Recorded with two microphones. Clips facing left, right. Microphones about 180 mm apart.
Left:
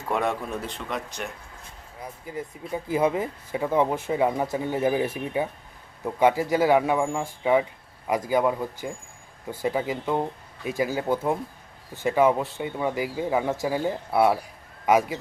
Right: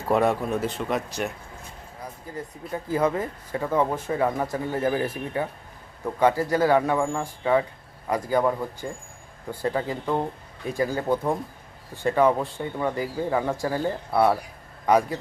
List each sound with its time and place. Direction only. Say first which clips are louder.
0.1 s speech: right 5 dB; 35° right (ahead or behind)
0.6 s speech: right 5 dB; 5° right (ahead or behind)
2.7 s speech: even; 10° left (ahead or behind)